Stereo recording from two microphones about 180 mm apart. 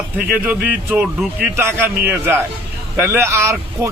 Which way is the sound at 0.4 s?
10° right (ahead or behind).